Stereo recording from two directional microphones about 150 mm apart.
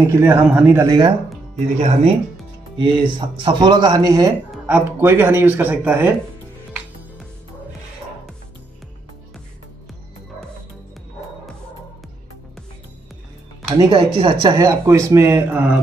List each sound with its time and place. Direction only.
0.0 s speech: 20° right (ahead or behind)
0.7 s speech: 30° right (ahead or behind)
1.8 s speech: 45° right (ahead or behind)
2.8 s speech: 35° right (ahead or behind)
4.6 s speech: 10° right (ahead or behind)
13.7 s speech: 25° right (ahead or behind)
13.9 s speech: 40° right (ahead or behind)
14.6 s speech: 20° right (ahead or behind)